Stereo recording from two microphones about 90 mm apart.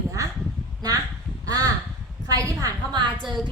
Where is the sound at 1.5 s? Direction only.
45° right (ahead or behind).